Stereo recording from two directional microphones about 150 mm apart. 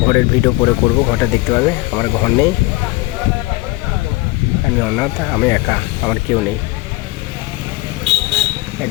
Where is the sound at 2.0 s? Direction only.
15° left (ahead or behind).